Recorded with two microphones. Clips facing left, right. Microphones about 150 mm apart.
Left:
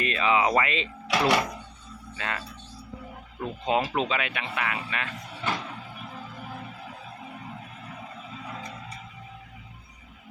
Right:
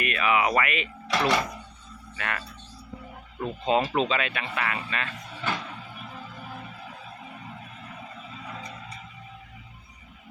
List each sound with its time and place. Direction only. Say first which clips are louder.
0.0 s speech: left 1 dB; 25° left (ahead or behind)
1.0 s speech: left 1 dB; 10° left (ahead or behind)
2.1 s speech: even; 20° left (ahead or behind)
3.6 s speech: right 2 dB; 15° left (ahead or behind)